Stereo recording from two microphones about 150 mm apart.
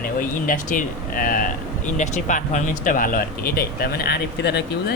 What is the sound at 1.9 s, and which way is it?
Speech, 55° left (ahead or behind).